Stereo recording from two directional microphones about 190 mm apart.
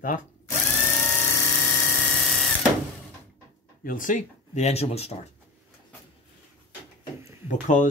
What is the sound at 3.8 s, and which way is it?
Speech, 45° left (ahead or behind).